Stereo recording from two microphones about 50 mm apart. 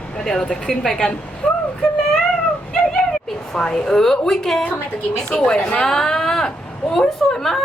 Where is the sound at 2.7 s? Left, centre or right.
Centre.